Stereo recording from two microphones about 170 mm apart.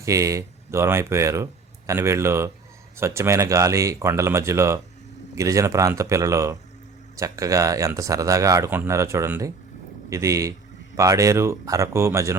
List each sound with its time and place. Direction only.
0.0 s speech: 20° right (ahead or behind)